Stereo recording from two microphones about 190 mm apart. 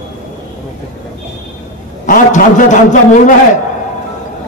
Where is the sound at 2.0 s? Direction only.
45° left (ahead or behind).